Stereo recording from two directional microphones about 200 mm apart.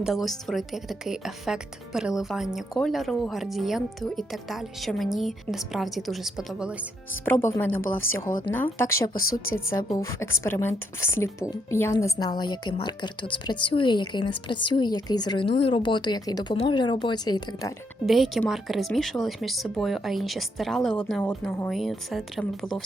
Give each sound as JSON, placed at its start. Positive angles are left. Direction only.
{"t": 0.0, "sound": "speech", "side_deg": 0}
{"t": 7.3, "sound": "a woman's voice", "side_deg": 15}
{"t": 18.0, "sound": "speech", "side_deg": 0}